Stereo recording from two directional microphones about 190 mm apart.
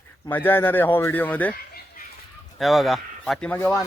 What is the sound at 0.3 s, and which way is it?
A man's voice, 10° left (ahead or behind).